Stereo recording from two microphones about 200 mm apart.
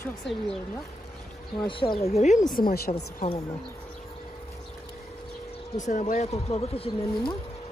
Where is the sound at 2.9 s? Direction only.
35° left (ahead or behind).